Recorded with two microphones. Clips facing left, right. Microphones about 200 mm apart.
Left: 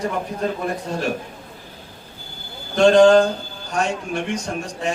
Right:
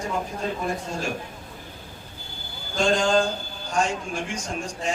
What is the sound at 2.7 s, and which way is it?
A man's voice, 65° left (ahead or behind).